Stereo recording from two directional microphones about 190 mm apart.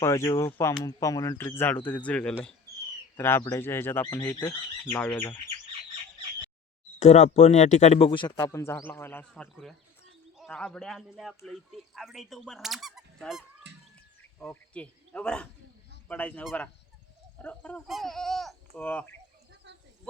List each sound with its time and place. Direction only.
0.0 s speech: 15° left (ahead or behind)
4.9 s speech: 10° left (ahead or behind)
7.0 s speech: 35° left (ahead or behind); by 13.4 s centre (ahead or behind)
13.7 s bird: 65° right (ahead or behind)
14.3 s speech: 5° left (ahead or behind)